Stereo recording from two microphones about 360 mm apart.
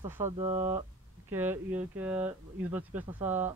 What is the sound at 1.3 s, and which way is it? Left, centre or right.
Speech, centre.